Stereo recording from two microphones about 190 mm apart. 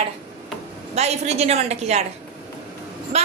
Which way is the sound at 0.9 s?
35° right (ahead or behind).